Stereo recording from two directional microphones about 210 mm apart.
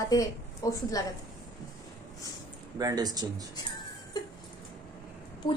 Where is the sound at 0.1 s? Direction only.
15° left (ahead or behind).